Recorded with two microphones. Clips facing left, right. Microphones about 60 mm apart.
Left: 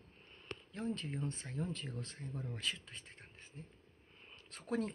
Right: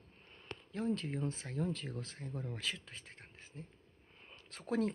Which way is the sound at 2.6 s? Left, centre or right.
Right.